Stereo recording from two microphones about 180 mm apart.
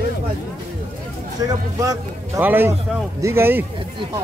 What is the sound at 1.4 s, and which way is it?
A man's voice, 20° right (ahead or behind).